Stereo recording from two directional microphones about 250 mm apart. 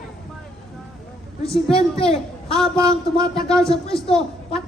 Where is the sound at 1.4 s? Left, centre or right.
Left.